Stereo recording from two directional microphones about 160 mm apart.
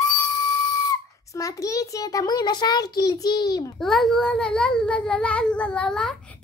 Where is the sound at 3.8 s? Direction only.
Centre (ahead or behind).